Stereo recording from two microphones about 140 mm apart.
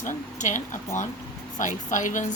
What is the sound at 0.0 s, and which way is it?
Speech, 65° left (ahead or behind).